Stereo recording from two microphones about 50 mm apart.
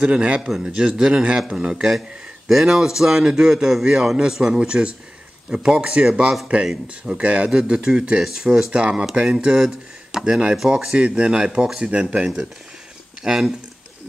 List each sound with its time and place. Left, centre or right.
0.0 s a man's voice: right
7.2 s a man's voice: right
7.5 s a man's voice: centre
11.0 s speech: right
11.9 s a man's voice: right
13.2 s speech: centre